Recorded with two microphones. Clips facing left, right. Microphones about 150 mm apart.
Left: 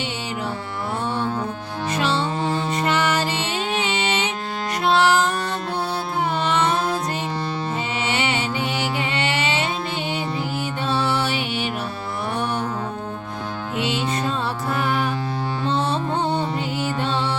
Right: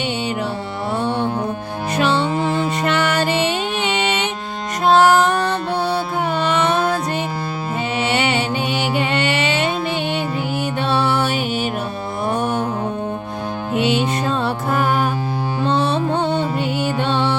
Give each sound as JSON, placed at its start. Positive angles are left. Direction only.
{"t": 2.0, "sound": "music", "side_deg": -65}
{"t": 4.9, "sound": "music", "side_deg": -45}
{"t": 6.4, "sound": "music", "side_deg": -65}
{"t": 8.1, "sound": "music", "side_deg": -65}
{"t": 9.0, "sound": "mantra", "side_deg": -60}
{"t": 10.8, "sound": "music", "side_deg": -60}
{"t": 13.7, "sound": "music", "side_deg": -60}
{"t": 15.6, "sound": "music", "side_deg": -65}